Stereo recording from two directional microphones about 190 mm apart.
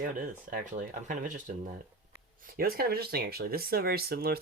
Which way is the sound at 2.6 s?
55° right (ahead or behind).